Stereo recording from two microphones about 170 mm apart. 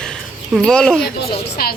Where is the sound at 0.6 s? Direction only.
5° left (ahead or behind).